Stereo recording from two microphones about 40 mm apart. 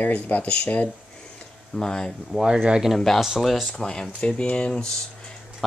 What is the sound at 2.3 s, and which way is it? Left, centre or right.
Speech, centre.